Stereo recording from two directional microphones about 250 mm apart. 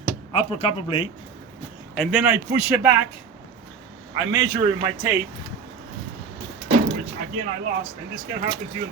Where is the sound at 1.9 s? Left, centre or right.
Centre.